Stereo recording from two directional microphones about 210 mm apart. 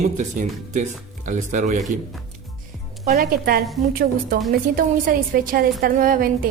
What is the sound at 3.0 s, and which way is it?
Speech, 45° right (ahead or behind).